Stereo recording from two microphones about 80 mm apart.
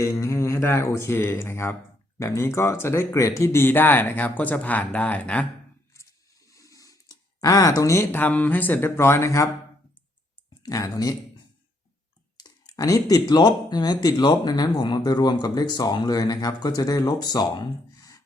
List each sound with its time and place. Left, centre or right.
0.0 s speech: left; by 5.5 s centre
6.5 s a sound: left
8.1 s speech: left
10.6 s speech: left
12.4 s speech: left